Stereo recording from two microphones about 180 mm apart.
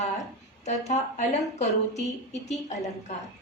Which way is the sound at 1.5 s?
40° left (ahead or behind).